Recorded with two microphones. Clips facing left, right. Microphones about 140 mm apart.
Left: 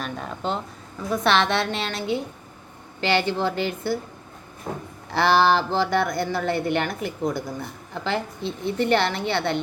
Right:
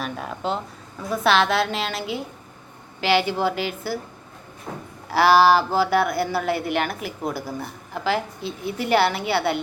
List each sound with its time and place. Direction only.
0.0 s a woman's voice: 5° right (ahead or behind)
5.1 s speech: 5° right (ahead or behind)